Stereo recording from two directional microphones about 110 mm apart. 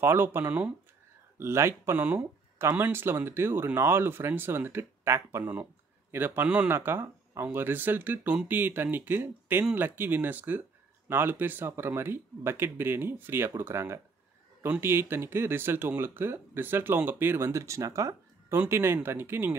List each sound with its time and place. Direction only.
0.0 s speech: 20° right (ahead or behind)
1.4 s speech: 25° right (ahead or behind)